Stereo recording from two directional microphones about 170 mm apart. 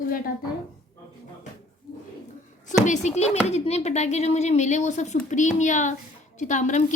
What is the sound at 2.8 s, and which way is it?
A woman's voice, 45° left (ahead or behind).